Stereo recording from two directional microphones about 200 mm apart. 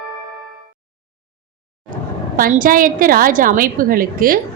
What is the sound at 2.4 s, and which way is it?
A woman's voice, 45° right (ahead or behind).